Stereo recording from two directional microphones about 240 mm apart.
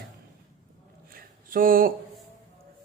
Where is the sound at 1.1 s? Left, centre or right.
Right.